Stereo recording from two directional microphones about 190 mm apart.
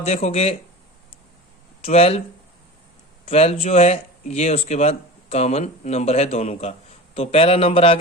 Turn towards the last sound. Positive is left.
turn(degrees=30)  # may be behind; listen again after turning